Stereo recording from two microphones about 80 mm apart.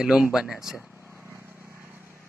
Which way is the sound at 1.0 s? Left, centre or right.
Right.